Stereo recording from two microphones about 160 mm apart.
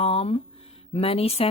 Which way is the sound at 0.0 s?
40° left (ahead or behind).